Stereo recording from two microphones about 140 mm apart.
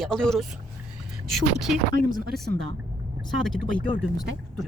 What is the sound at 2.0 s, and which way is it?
Speech, 85° right.